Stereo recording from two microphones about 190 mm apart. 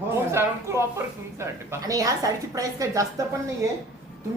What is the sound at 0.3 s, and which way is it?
Speech, 15° right (ahead or behind).